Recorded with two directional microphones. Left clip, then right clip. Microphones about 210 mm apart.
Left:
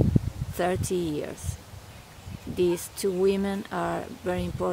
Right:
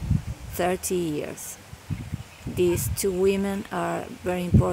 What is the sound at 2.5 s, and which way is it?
Speech, 10° right (ahead or behind).